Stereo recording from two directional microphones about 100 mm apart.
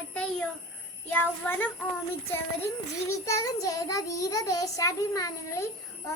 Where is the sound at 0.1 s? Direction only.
10° left (ahead or behind).